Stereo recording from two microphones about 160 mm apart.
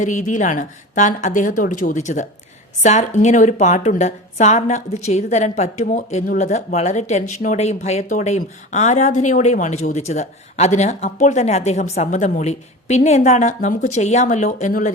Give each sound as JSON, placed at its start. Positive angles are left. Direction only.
{"t": 0.0, "sound": "speech", "side_deg": 50}